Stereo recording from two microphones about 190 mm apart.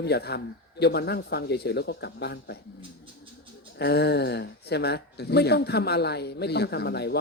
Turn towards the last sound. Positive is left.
turn(degrees=60)  # may be behind; listen again after turning